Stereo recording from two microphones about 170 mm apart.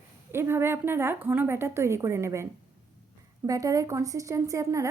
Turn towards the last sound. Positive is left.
turn(degrees=-20)  # may be behind; listen again after turning